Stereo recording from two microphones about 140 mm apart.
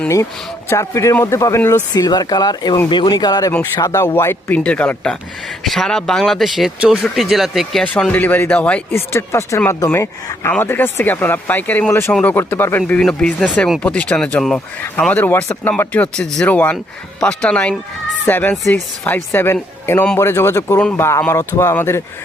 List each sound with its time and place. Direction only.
0.7 s speech: 20° left (ahead or behind)
13.0 s speech: 5° left (ahead or behind)